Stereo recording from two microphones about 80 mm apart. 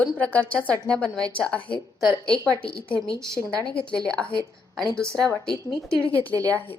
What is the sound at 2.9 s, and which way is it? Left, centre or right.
Speech, centre.